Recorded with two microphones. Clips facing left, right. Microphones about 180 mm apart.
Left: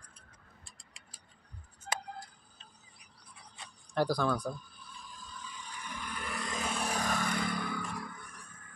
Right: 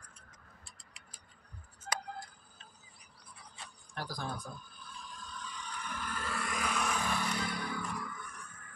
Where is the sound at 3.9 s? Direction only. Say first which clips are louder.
Left 11 dB; 80° left.